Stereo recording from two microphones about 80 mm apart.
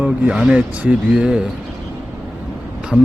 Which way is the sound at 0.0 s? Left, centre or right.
Centre.